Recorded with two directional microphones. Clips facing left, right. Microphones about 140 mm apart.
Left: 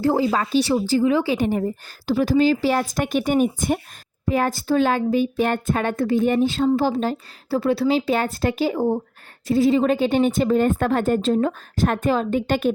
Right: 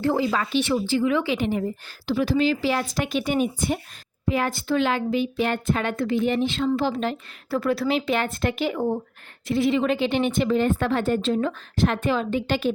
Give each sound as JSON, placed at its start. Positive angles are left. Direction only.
{"t": 0.0, "sound": "speech", "side_deg": 35}